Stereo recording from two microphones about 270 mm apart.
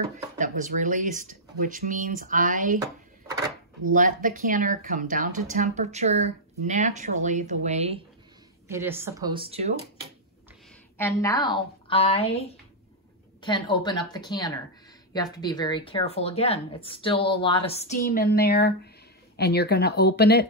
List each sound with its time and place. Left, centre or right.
0.4 s speech: right
3.9 s speech: right
8.6 s speech: centre
11.0 s a woman's voice: centre; by 20.4 s left